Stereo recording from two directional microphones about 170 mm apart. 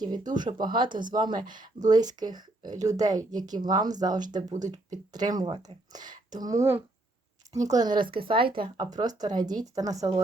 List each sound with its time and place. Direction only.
0.0 s speech: 25° right (ahead or behind)
0.7 s speech: 55° right (ahead or behind)
1.2 s speech: 25° right (ahead or behind)